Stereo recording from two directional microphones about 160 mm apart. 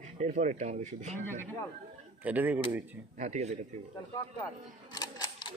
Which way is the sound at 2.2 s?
10° right (ahead or behind).